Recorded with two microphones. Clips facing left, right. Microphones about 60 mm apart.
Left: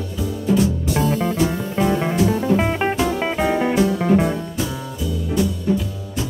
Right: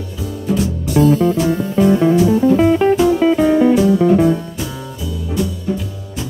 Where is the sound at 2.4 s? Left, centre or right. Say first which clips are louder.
Right 7 dB; centre.